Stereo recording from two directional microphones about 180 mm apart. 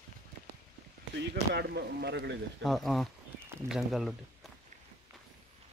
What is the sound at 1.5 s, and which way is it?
Speech, 65° right (ahead or behind).